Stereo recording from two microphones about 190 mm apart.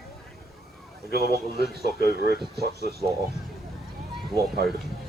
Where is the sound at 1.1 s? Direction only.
55° right (ahead or behind).